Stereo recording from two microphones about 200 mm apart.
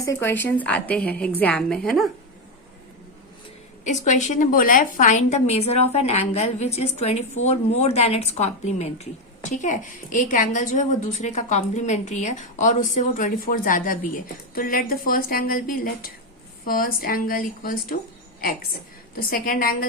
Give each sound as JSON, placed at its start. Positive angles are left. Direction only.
{"t": 0.0, "sound": "a woman's voice", "side_deg": 15}
{"t": 3.8, "sound": "a woman's voice", "side_deg": 40}
{"t": 19.1, "sound": "a woman's voice", "side_deg": 45}